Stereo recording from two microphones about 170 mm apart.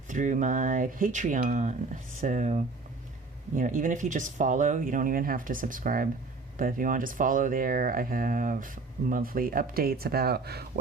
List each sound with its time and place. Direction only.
0.1 s speech: 50° right (ahead or behind); by 10.7 s 65° right (ahead or behind)